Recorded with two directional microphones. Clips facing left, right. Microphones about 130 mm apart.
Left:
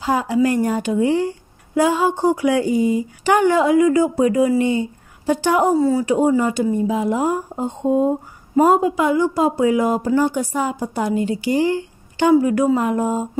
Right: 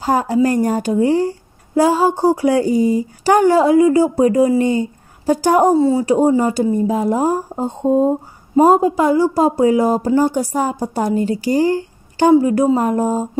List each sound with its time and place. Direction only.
0.0 s speech: 45° right (ahead or behind)
5.8 s speech: 30° right (ahead or behind)
6.1 s speech: 40° right (ahead or behind)